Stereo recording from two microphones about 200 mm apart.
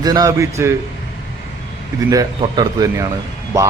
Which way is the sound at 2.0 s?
20° right (ahead or behind).